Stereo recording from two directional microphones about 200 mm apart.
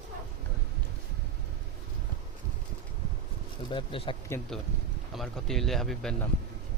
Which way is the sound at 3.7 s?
25° left (ahead or behind).